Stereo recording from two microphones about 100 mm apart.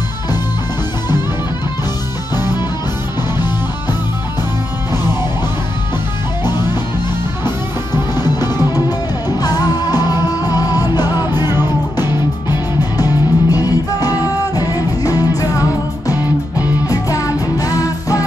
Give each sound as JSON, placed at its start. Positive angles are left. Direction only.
{"t": 2.3, "sound": "music", "side_deg": 40}
{"t": 8.1, "sound": "music", "side_deg": 40}
{"t": 16.8, "sound": "music", "side_deg": 35}